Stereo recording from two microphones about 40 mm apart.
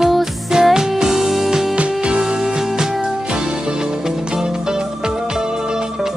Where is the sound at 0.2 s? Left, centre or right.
Centre.